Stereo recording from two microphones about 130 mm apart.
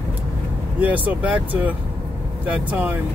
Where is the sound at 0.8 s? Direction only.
10° right (ahead or behind).